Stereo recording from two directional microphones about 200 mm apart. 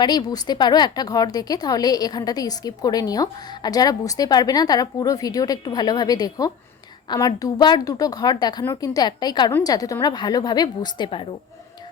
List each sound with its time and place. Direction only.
0.0 s speech: 20° left (ahead or behind)